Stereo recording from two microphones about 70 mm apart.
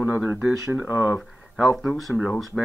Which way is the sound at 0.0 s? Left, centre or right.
Right.